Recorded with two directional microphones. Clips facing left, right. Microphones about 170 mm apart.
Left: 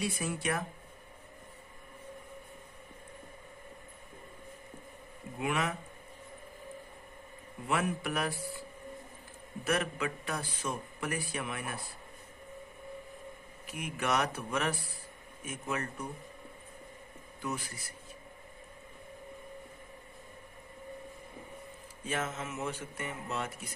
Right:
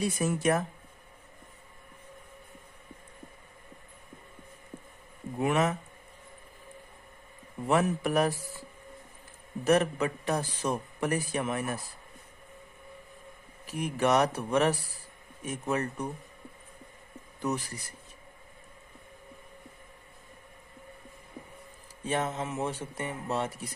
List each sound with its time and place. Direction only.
0.0 s speech: 45° right (ahead or behind)
5.4 s a man's voice: 40° right (ahead or behind)
7.7 s a man's voice: 40° right (ahead or behind)
9.6 s a man's voice: 35° right (ahead or behind)
13.7 s a man's voice: 40° right (ahead or behind)
17.4 s a man's voice: 40° right (ahead or behind)
22.0 s a man's voice: 35° right (ahead or behind)